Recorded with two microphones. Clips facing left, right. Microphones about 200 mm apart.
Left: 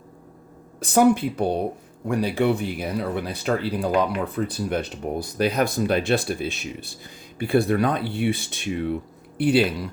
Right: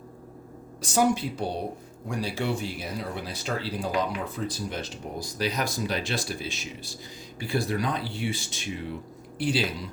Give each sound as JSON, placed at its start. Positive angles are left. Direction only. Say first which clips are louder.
{"t": 0.8, "sound": "speech", "louder": "left 6 dB", "side_deg": 55}